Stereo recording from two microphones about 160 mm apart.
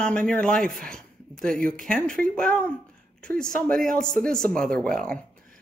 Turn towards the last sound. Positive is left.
turn(degrees=5)  # may be behind; listen again after turning